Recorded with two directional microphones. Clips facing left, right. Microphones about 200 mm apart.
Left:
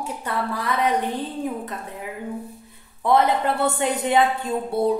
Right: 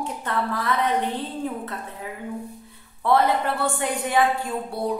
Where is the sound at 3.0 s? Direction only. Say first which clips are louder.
Left 1 dB; 20° left (ahead or behind).